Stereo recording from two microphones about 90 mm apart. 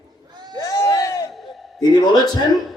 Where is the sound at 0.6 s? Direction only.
35° left (ahead or behind).